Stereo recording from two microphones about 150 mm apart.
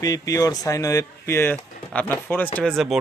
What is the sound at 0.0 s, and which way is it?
Speech, 25° left (ahead or behind).